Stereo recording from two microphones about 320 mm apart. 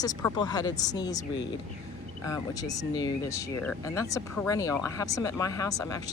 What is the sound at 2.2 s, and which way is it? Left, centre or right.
Speech, centre.